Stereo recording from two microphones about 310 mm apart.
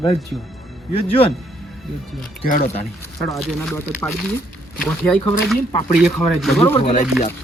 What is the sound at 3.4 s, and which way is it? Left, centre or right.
Speech, centre.